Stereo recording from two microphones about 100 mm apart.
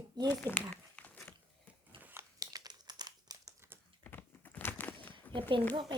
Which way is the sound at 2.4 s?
40° right (ahead or behind).